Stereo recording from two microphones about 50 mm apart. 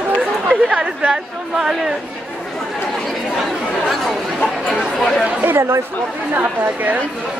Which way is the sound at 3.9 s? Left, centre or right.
Centre.